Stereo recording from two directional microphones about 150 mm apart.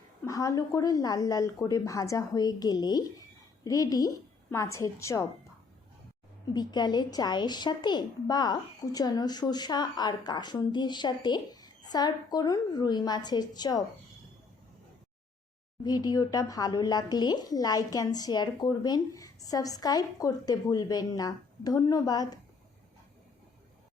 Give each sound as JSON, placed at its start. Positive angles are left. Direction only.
{"t": 0.3, "sound": "a woman's voice", "side_deg": 20}
{"t": 6.5, "sound": "a woman's voice", "side_deg": 30}
{"t": 15.8, "sound": "a woman's voice", "side_deg": 25}